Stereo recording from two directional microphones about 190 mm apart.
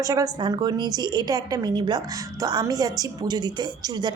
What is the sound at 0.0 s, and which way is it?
Speech, 20° right (ahead or behind).